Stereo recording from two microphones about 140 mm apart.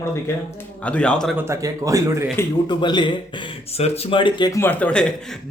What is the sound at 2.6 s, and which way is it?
Speech, 35° left (ahead or behind).